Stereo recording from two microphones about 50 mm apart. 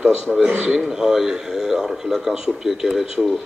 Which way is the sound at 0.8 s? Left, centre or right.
Centre.